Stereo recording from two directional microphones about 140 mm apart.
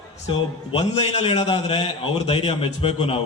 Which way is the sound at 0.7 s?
45° left (ahead or behind).